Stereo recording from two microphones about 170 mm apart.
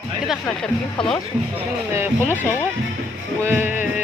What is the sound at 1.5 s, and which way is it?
Speech, 15° right (ahead or behind).